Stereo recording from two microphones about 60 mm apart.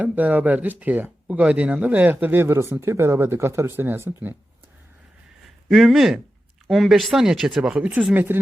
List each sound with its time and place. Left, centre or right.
0.0 s speech: right
2.0 s speech: right
5.6 s speech: centre
7.8 s speech: right